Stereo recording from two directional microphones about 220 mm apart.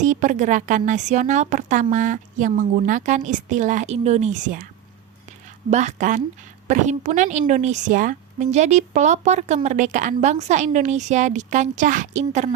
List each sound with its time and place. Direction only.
0.0 s a woman's voice: 35° right (ahead or behind)
5.7 s a woman's voice: 35° right (ahead or behind)